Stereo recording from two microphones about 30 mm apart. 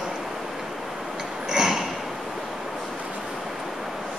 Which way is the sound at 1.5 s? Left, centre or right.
Centre.